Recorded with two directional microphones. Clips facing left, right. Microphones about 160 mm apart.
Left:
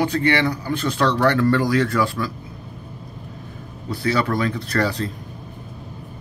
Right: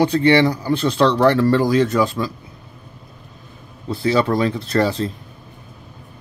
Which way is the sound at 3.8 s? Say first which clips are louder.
Right 4 dB; 25° right (ahead or behind).